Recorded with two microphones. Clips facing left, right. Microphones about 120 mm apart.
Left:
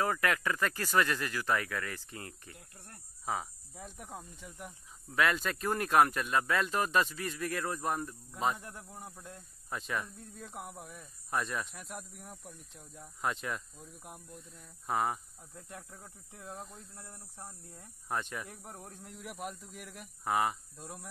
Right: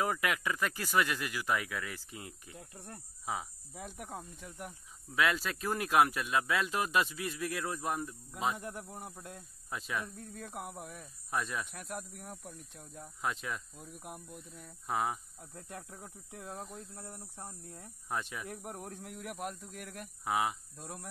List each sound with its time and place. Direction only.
0.0 s speech: 15° right (ahead or behind)
3.8 s speech: 60° right (ahead or behind)
4.1 s speech: centre (ahead or behind)
10.1 s speech: 65° right (ahead or behind)
10.5 s speech: centre (ahead or behind)